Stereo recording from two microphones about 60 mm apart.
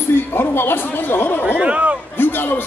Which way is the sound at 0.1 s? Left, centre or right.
Left.